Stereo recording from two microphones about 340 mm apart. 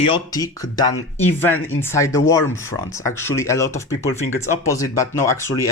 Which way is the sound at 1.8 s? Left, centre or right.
Centre.